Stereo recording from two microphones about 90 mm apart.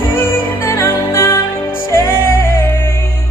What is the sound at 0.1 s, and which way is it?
Music, 25° left (ahead or behind).